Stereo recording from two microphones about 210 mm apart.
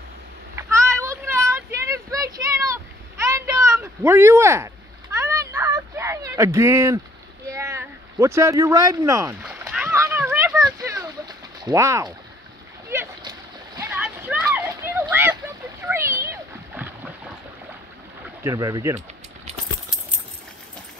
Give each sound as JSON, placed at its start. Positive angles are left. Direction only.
{"t": 0.6, "sound": "a sound", "side_deg": -15}
{"t": 12.9, "sound": "splash", "side_deg": -15}
{"t": 18.4, "sound": "speech", "side_deg": -15}